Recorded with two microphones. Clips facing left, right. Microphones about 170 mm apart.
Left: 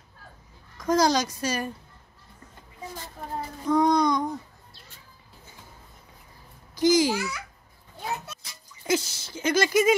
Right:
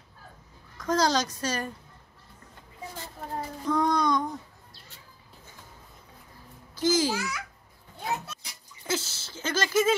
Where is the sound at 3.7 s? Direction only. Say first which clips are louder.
Left 4 dB; 15° left (ahead or behind).